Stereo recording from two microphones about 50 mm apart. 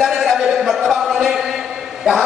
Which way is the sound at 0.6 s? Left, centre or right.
Centre.